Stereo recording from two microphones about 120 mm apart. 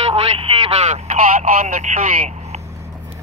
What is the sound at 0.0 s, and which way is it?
Telephone, 55° right (ahead or behind).